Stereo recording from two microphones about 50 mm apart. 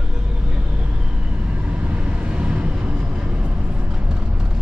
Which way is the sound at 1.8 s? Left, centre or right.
Right.